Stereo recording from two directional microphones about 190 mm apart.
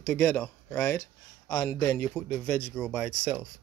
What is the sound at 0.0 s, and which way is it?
Speech, 10° left (ahead or behind).